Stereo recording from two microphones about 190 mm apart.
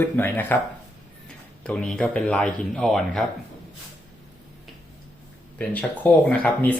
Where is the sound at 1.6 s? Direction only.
5° left (ahead or behind).